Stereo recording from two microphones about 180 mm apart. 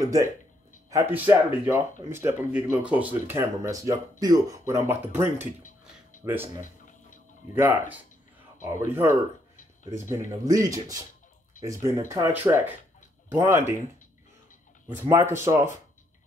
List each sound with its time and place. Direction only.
0.0 s speech: 20° right (ahead or behind)
6.6 s a sound: 45° left (ahead or behind)
8.6 s speech: 15° right (ahead or behind)
14.9 s speech: 15° right (ahead or behind)